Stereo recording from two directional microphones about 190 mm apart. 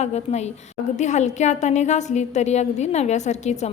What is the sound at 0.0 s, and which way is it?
A woman's voice, 35° left (ahead or behind).